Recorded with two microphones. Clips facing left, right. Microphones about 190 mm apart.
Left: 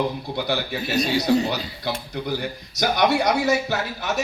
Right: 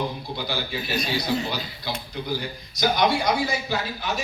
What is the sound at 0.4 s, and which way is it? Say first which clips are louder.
Speech: left 3 dB; 65° left (ahead or behind).